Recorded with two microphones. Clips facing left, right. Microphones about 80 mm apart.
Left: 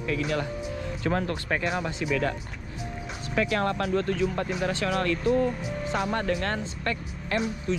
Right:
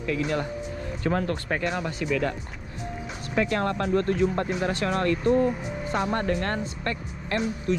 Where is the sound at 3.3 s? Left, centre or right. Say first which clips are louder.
Right 1 dB; right.